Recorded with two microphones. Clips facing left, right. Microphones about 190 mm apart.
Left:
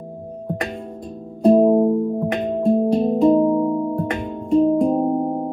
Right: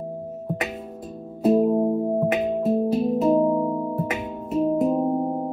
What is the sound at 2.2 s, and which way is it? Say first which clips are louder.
Music: left 2 dB; 5° right (ahead or behind).